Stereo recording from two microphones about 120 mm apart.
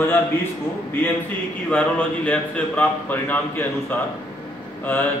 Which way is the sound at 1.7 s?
10° left (ahead or behind).